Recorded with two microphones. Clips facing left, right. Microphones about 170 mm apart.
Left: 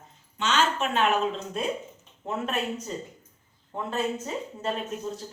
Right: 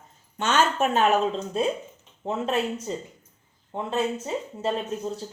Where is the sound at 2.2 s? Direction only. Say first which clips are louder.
Right 3 dB; 30° right (ahead or behind).